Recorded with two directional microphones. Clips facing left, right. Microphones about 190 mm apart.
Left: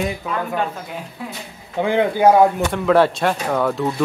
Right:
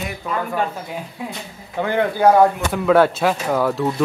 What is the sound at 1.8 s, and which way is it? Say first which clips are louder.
Speech: left 2 dB; 15° left (ahead or behind).